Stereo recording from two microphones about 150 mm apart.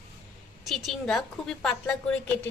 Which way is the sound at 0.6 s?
Centre (ahead or behind).